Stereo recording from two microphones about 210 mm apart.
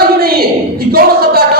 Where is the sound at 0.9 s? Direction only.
45° right (ahead or behind).